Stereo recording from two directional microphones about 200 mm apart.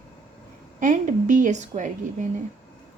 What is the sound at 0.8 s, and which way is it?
A woman's voice, 40° right (ahead or behind).